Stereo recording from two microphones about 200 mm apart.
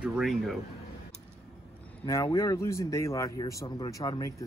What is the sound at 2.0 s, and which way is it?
Speech, 15° left (ahead or behind).